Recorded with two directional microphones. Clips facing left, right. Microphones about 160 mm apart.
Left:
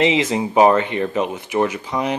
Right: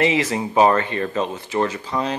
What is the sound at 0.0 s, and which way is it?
Speech, 20° left (ahead or behind).